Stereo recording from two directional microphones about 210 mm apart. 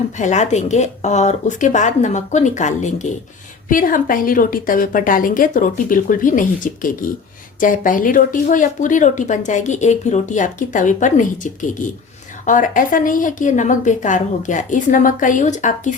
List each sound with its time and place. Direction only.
0.2 s speech: 35° left (ahead or behind)